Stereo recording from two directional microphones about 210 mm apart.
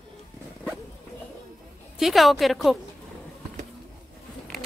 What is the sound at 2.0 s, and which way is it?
Speech, centre (ahead or behind).